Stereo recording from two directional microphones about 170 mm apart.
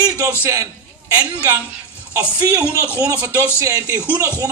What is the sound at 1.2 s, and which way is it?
Music, 10° right (ahead or behind).